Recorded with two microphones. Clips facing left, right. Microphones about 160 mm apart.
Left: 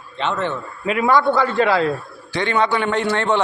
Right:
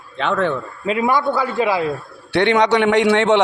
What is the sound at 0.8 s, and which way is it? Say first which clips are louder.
Speech: right 1 dB; 30° right (ahead or behind).